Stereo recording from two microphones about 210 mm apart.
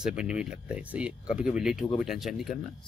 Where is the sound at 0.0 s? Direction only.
5° right (ahead or behind).